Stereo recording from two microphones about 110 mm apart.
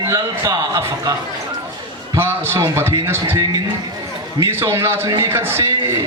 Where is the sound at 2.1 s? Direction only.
20° right (ahead or behind).